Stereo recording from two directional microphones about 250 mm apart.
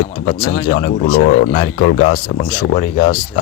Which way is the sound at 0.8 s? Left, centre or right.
Left.